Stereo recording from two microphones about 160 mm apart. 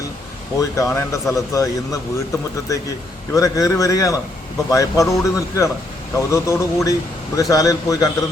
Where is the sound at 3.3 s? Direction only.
20° left (ahead or behind).